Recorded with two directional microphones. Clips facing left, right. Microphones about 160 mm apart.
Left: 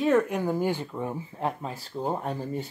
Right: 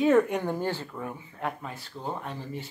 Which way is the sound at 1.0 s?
30° left (ahead or behind).